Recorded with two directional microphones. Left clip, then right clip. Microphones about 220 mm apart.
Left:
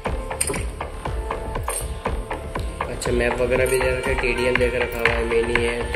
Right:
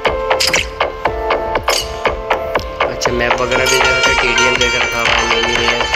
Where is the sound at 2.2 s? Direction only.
40° right (ahead or behind).